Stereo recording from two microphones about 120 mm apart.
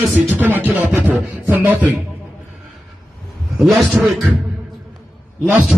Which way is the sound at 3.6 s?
Centre (ahead or behind).